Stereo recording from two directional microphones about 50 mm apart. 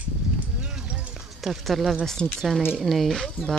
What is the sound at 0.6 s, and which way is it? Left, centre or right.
Run, centre.